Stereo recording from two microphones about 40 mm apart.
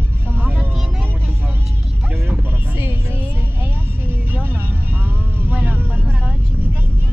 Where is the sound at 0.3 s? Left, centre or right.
Right.